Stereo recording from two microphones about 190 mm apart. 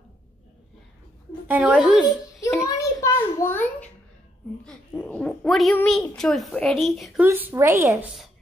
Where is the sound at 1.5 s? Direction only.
5° right (ahead or behind).